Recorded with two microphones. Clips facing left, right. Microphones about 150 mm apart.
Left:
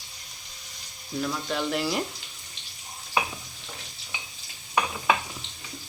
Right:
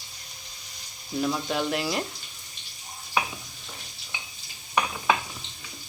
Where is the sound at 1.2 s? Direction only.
10° right (ahead or behind).